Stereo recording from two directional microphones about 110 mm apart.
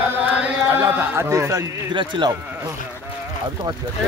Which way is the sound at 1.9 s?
45° right (ahead or behind).